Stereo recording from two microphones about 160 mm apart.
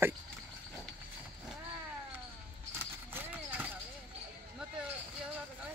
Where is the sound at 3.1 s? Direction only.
10° right (ahead or behind).